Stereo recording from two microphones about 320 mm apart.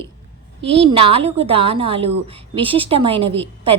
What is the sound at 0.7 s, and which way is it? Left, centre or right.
A woman's voice, centre.